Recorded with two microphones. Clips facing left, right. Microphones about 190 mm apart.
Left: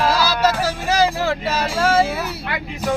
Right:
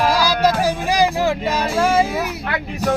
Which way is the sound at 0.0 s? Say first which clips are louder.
Right 1 dB; 15° right (ahead or behind).